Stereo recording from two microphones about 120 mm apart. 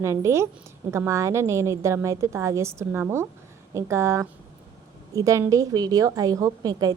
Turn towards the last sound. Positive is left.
turn(degrees=-35)  # may be behind; listen again after turning